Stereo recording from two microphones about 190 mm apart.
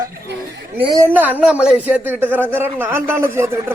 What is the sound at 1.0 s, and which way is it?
A man's voice, 10° right (ahead or behind).